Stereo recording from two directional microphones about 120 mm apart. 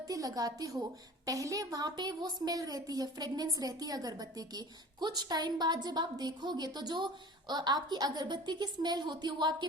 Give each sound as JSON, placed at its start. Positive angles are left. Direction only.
{"t": 0.1, "sound": "a woman's voice", "side_deg": -30}